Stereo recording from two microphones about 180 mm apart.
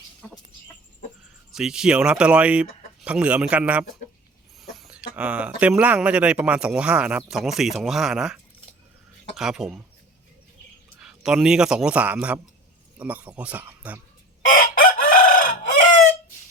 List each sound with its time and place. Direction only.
1.5 s a man's voice: 5° right (ahead or behind)
4.8 s a sound: 5° right (ahead or behind)
5.1 s a man's voice: 5° right (ahead or behind)
11.0 s a man's voice: 5° right (ahead or behind)
14.5 s chicken: 50° left (ahead or behind)